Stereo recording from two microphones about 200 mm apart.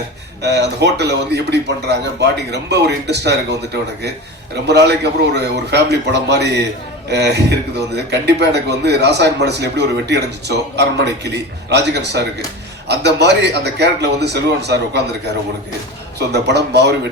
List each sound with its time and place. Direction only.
0.4 s speech: 55° right (ahead or behind)
16.1 s speech: 55° right (ahead or behind)